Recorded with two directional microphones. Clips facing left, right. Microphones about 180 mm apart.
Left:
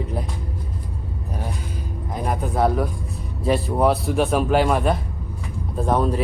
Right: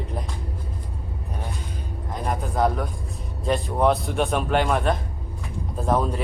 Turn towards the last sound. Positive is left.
turn(degrees=0)  # may be behind; listen again after turning